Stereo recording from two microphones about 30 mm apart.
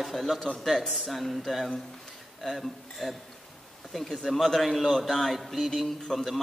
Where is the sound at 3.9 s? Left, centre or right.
Centre.